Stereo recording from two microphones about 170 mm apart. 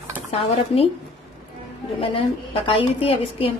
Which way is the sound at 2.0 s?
35° left (ahead or behind).